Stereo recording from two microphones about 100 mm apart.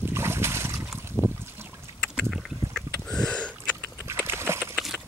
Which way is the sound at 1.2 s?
30° left (ahead or behind).